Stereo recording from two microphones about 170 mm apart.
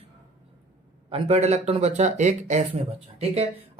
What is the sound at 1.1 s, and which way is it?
Speech, 40° right (ahead or behind).